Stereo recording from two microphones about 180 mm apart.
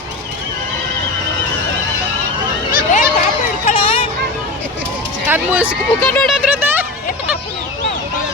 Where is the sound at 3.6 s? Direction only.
30° left (ahead or behind).